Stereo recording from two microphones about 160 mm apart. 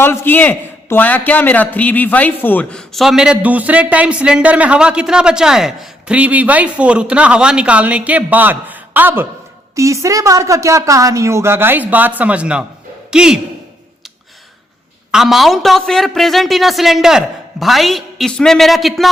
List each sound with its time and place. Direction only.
0.0 s a man's voice: 15° left (ahead or behind); by 13.4 s 5° right (ahead or behind)
15.1 s a man's voice: centre (ahead or behind)